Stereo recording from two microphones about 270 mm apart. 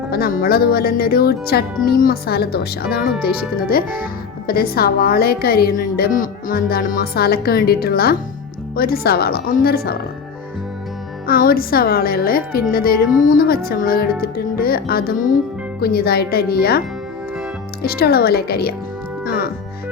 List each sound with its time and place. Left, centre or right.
0.1 s speech: left
11.3 s speech: left
17.8 s speech: left